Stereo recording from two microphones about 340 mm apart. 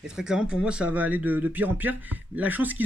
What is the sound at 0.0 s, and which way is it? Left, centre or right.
Speech, centre.